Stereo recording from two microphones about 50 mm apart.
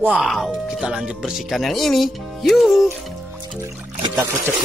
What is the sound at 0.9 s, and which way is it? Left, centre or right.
Speech, centre.